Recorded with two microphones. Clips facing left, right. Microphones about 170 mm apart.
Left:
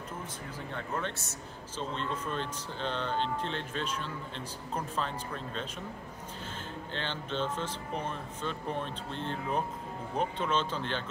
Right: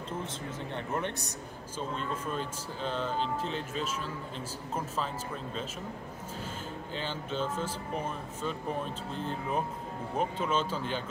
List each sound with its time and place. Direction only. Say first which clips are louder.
0.7 s speech: right 2 dB; 20° right (ahead or behind)
6.9 s speech: even; 5° right (ahead or behind)